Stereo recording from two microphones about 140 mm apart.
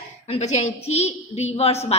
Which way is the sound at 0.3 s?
50° left (ahead or behind).